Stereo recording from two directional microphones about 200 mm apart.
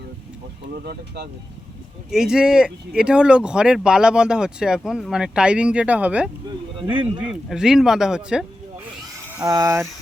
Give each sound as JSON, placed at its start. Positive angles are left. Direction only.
{"t": 0.9, "sound": "speech", "side_deg": -55}
{"t": 2.0, "sound": "speech", "side_deg": -5}
{"t": 9.4, "sound": "speech", "side_deg": -20}